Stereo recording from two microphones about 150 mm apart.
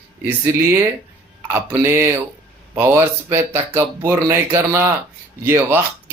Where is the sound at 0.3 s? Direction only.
15° right (ahead or behind).